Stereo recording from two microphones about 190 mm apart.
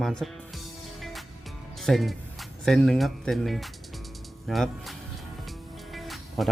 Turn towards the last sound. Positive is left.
turn(degrees=0)  # may be behind; listen again after turning